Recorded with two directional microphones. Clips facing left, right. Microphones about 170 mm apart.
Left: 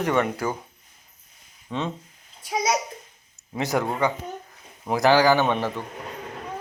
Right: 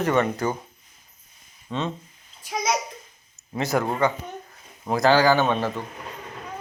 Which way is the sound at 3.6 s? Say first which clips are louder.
Right 1 dB; 15° left (ahead or behind).